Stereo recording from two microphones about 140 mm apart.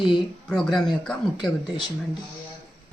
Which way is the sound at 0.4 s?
5° left (ahead or behind).